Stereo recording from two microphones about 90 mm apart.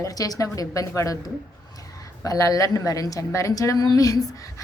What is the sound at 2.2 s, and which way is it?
A woman's voice, 40° left (ahead or behind).